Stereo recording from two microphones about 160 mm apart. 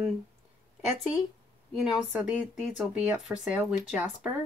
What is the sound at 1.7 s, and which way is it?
A woman's voice, centre (ahead or behind).